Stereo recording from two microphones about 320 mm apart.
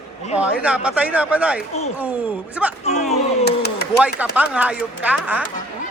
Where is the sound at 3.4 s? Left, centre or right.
Left.